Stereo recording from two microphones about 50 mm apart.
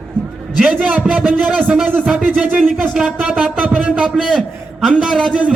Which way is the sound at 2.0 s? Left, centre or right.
Centre.